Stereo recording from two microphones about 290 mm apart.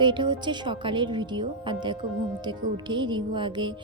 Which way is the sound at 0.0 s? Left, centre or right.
Centre.